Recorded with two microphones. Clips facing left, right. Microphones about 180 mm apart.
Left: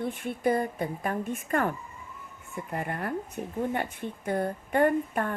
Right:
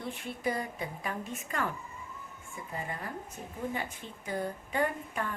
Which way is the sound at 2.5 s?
65° left (ahead or behind).